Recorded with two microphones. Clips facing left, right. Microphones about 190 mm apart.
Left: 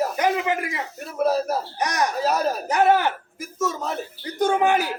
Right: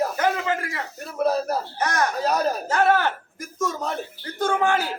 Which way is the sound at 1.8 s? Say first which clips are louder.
Even; 15° left (ahead or behind).